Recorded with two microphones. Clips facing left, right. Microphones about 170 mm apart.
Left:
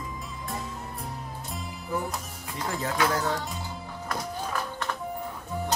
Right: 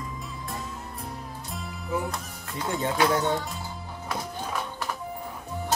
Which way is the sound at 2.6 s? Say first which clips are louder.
Right 3 dB; 25° right (ahead or behind).